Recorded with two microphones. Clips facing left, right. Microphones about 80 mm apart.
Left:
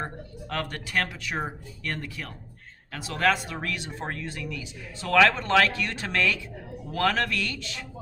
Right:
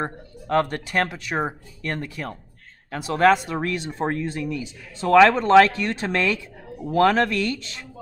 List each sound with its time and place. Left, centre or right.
0.0 s speech: right